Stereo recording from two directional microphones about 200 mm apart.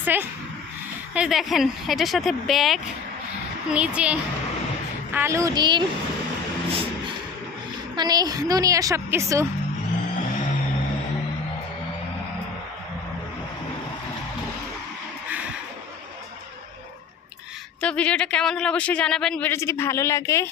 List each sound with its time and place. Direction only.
0.0 s a woman's voice: 10° right (ahead or behind)
7.9 s a woman's voice: 20° right (ahead or behind)
17.7 s speech: 5° left (ahead or behind)